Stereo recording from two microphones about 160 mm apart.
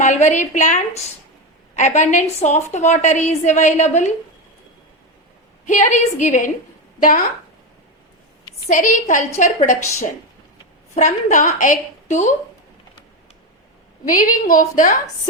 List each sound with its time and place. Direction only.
0.0 s a woman's voice: 45° left (ahead or behind)
5.6 s a woman's voice: 50° left (ahead or behind)
8.7 s a woman's voice: 55° left (ahead or behind)
10.9 s a woman's voice: 50° left (ahead or behind)
14.0 s a woman's voice: 55° left (ahead or behind)